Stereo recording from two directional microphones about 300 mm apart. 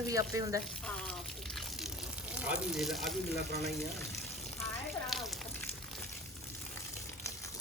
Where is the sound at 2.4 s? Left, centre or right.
Centre.